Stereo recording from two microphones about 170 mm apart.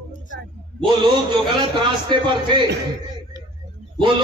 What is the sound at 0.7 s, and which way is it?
A man's voice, 30° right (ahead or behind).